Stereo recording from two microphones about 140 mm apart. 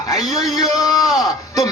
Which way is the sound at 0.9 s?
Centre (ahead or behind).